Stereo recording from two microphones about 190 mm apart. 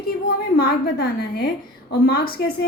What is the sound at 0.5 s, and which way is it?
A woman's voice, 55° left (ahead or behind).